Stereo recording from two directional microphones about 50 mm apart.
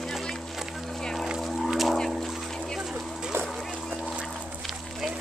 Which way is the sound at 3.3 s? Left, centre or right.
Right.